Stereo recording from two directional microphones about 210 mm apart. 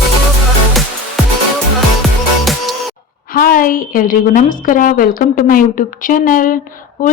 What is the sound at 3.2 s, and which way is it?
A woman's voice, 40° left (ahead or behind).